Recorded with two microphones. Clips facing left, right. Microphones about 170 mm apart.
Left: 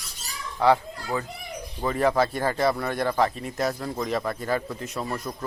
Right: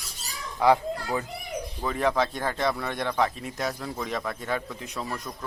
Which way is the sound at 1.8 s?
Centre (ahead or behind).